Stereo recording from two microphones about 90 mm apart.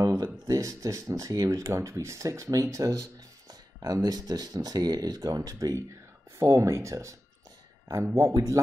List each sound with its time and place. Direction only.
0.0 s speech: 35° right (ahead or behind)